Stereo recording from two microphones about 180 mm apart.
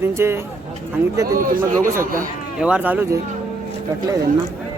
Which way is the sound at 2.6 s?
5° right (ahead or behind).